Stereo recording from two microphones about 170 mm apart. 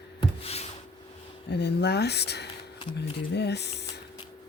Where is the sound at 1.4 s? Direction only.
80° left.